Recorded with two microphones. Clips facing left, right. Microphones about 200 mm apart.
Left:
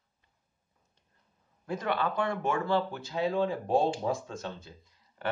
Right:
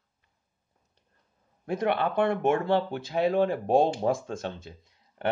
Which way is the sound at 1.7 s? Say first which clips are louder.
Right 4 dB; 60° right (ahead or behind).